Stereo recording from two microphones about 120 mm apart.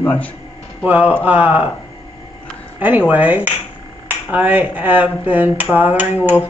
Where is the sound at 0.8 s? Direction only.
10° right (ahead or behind).